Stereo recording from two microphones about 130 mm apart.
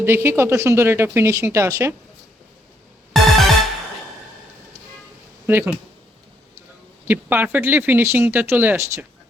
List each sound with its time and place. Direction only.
0.0 s speech: 20° right (ahead or behind)
3.1 s music: centre (ahead or behind)
5.5 s speech: 15° right (ahead or behind)
7.1 s speech: 15° right (ahead or behind)